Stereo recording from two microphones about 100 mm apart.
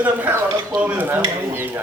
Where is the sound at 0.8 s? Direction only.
15° right (ahead or behind).